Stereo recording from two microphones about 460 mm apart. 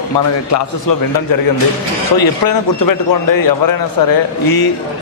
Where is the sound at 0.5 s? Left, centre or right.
Left.